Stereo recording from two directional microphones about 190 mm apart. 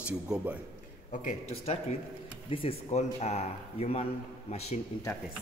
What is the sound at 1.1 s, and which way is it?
Speech, 40° left (ahead or behind).